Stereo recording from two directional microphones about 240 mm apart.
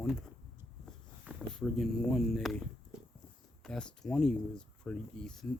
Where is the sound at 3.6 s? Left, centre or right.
Centre.